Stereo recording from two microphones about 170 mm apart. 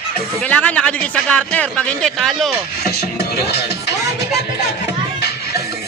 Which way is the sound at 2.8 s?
70° left (ahead or behind).